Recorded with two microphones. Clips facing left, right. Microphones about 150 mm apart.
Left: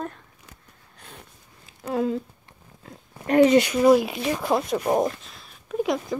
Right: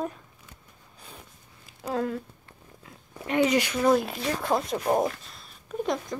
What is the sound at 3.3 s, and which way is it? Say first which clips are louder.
Speech: left 7 dB; 35° left (ahead or behind).